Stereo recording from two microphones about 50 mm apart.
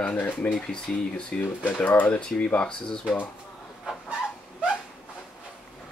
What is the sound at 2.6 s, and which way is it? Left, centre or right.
Speech, centre.